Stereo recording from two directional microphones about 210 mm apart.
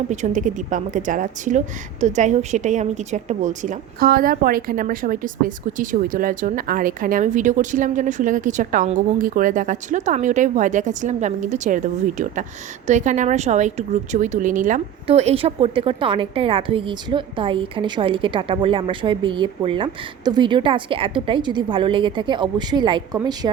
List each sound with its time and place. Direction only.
0.1 s a woman's voice: 35° right (ahead or behind); by 23.5 s 20° right (ahead or behind)